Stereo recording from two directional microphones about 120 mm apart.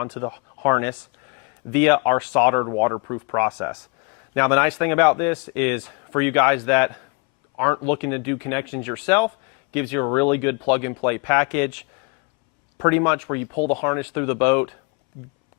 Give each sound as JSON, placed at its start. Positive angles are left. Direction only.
{"t": 0.0, "sound": "a man's voice", "side_deg": 15}
{"t": 12.8, "sound": "a man's voice", "side_deg": 15}